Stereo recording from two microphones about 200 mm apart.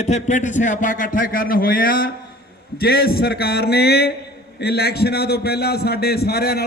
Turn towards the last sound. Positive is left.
turn(degrees=50)  # may be behind; listen again after turning